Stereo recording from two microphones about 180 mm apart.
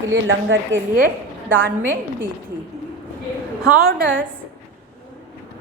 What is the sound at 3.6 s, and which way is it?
Speech, 60° right (ahead or behind).